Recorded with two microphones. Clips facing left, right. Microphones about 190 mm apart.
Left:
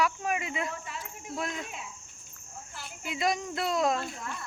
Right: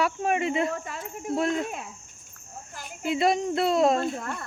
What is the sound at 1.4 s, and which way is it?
Speech, 50° right (ahead or behind).